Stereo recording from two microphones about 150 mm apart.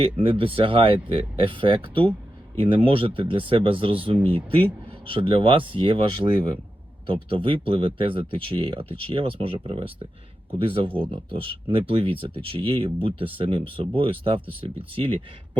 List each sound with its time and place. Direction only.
0.0 s speech: 35° right (ahead or behind)